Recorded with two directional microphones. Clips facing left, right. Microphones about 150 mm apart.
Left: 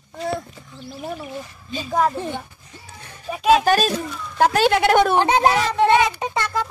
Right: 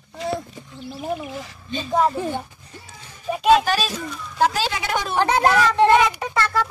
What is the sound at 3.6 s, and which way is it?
Speech, 50° left (ahead or behind).